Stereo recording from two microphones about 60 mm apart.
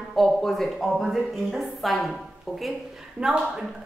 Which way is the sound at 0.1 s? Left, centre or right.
Centre.